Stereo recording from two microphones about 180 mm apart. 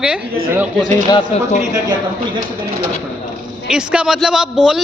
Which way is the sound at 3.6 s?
5° right (ahead or behind).